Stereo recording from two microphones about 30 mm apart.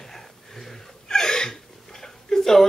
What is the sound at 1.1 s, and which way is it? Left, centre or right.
Gasp, centre.